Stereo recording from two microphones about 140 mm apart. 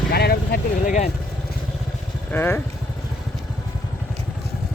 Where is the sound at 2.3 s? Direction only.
15° left (ahead or behind).